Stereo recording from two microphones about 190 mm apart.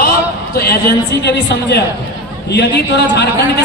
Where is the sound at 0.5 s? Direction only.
55° left (ahead or behind).